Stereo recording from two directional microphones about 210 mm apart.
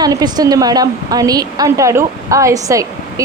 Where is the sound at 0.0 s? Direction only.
20° right (ahead or behind).